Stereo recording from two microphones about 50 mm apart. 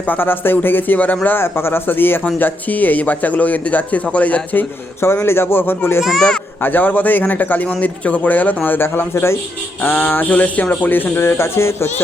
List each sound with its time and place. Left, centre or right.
0.1 s a man's voice: left
1.4 s speech: left
2.4 s a man's voice: left
5.2 s a man's voice: left
9.1 s a man's voice: left
9.8 s a man's voice: left